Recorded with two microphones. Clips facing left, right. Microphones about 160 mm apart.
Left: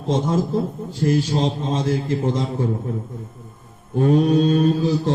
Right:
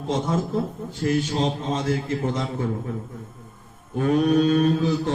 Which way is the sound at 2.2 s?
35° left (ahead or behind).